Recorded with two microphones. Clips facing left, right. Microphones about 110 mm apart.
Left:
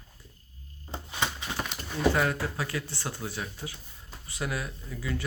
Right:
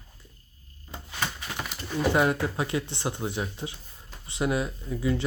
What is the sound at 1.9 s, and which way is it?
Speech, 20° right (ahead or behind).